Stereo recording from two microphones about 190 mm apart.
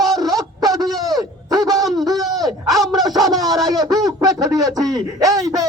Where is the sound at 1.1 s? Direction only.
20° right (ahead or behind).